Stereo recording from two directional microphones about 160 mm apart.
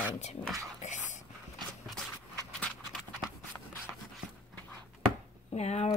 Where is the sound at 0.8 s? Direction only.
45° left (ahead or behind).